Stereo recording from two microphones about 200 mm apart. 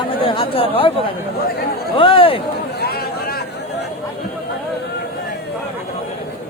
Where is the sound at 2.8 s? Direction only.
50° left (ahead or behind).